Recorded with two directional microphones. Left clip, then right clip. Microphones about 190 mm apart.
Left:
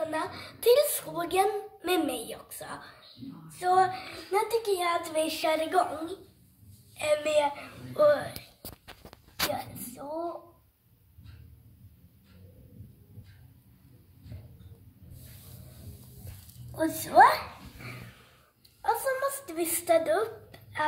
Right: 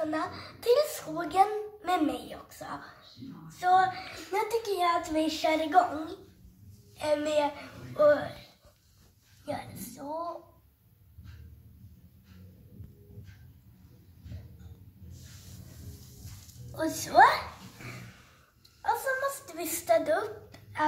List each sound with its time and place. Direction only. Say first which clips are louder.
0.1 s a child's voice: even; 45° left (ahead or behind)
3.4 s female singing: even; 50° left (ahead or behind)
4.3 s a woman's voice: left 3 dB; 35° left (ahead or behind)
7.0 s a woman's voice: left 2 dB; 30° left (ahead or behind)
7.9 s a woman's voice: even; 45° left (ahead or behind)
9.5 s speech: left 3 dB; 40° left (ahead or behind)
16.7 s a woman's voice: left 2 dB; 20° left (ahead or behind)
18.8 s a woman's voice: left 1 dB; 45° left (ahead or behind)